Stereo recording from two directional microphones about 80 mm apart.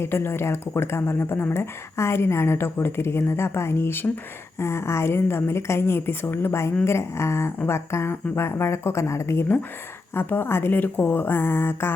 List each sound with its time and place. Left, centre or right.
0.0 s a woman's voice: left